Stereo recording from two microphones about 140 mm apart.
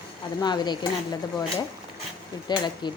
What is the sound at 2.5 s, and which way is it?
Speech, 30° left (ahead or behind).